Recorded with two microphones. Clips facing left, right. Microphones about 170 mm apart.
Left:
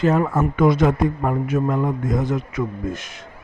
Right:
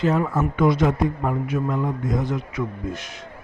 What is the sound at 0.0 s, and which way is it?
A man's voice, 50° left (ahead or behind).